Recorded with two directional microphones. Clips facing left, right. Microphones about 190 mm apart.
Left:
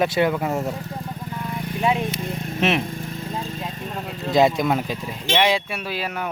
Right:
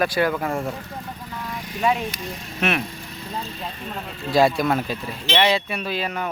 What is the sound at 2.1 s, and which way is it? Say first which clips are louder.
Vehicle: left 5 dB; 55° left (ahead or behind).